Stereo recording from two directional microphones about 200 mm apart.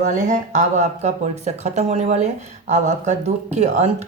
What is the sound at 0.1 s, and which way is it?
Speech, 35° right (ahead or behind).